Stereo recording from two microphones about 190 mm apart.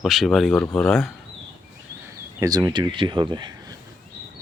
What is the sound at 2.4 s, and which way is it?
Speech, 20° right (ahead or behind).